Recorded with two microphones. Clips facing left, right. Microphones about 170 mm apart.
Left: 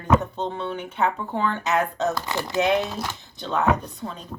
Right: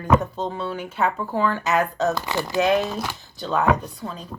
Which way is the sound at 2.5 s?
20° left (ahead or behind).